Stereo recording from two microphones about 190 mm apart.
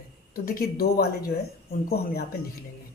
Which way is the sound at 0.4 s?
50° left (ahead or behind).